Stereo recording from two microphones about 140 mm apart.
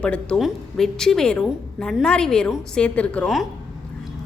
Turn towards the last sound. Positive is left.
turn(degrees=5)  # may be behind; listen again after turning